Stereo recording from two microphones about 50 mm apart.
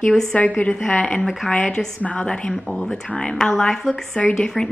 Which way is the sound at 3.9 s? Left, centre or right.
Left.